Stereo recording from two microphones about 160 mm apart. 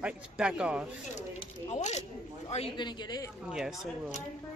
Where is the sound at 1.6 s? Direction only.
45° left (ahead or behind); by 3.3 s 25° left (ahead or behind).